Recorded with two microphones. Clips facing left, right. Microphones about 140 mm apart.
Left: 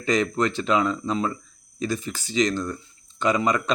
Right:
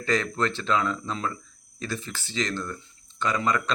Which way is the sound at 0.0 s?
15° left (ahead or behind).